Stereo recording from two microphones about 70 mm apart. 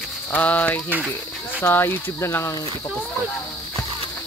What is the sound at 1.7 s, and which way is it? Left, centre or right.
Speech, left.